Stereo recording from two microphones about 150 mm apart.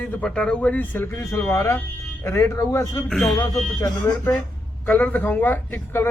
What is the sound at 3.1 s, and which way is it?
Speech, centre (ahead or behind).